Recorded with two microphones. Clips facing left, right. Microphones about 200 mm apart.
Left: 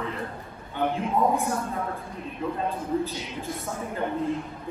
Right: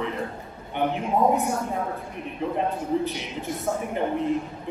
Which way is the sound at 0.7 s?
20° right (ahead or behind).